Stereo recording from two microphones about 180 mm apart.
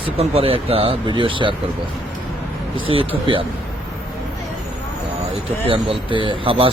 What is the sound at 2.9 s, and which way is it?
Speech, 30° right (ahead or behind).